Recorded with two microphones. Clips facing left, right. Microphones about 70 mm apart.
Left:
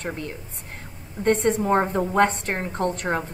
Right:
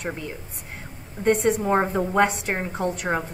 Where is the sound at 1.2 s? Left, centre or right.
Centre.